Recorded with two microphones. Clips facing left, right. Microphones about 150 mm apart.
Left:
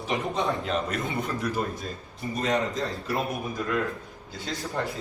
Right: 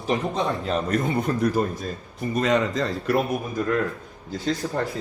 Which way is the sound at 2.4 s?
80° right.